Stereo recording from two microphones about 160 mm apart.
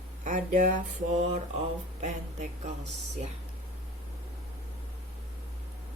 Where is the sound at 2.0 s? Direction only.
50° right (ahead or behind).